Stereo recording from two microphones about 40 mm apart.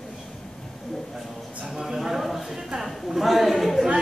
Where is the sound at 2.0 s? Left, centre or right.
Centre.